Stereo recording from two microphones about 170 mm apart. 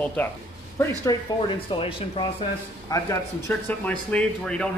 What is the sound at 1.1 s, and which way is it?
Speech, 20° left (ahead or behind).